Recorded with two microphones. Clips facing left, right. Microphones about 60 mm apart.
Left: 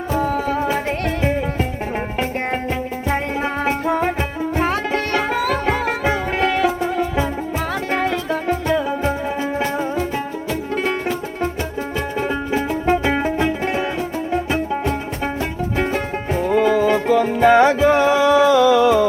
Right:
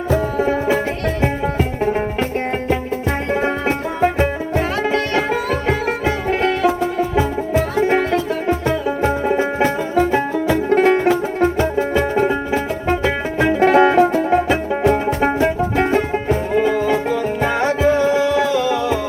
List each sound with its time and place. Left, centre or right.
5.3 s music: centre
7.8 s music: centre
9.4 s music: right
12.3 s music: centre
13.6 s music: right
16.6 s music: centre
17.2 s music: left